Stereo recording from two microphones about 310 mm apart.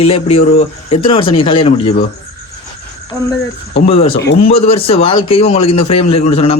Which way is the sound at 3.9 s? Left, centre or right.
Centre.